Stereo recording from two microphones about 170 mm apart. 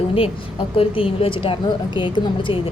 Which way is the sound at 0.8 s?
35° left (ahead or behind).